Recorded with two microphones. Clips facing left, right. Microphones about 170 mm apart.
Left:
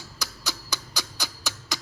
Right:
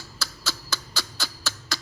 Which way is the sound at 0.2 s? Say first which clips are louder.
Right 1 dB; 15° left (ahead or behind).